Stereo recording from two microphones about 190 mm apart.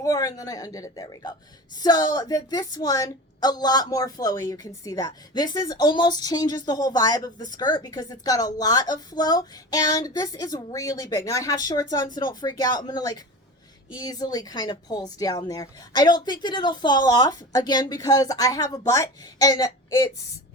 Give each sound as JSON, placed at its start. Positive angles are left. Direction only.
{"t": 0.0, "sound": "a woman's voice", "side_deg": 20}